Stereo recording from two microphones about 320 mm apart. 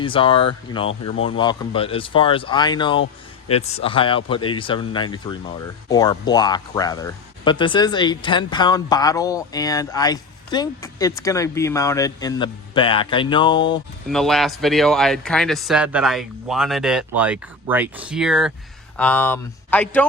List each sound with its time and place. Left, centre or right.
0.0 s speech: centre
14.1 s speech: centre